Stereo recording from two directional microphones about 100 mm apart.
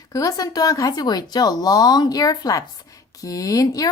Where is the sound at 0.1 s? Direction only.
35° left (ahead or behind).